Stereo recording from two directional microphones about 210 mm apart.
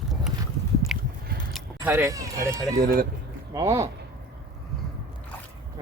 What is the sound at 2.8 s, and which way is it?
Speech, 45° right (ahead or behind).